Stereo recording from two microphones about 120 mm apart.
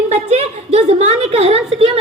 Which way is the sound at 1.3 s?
55° right (ahead or behind).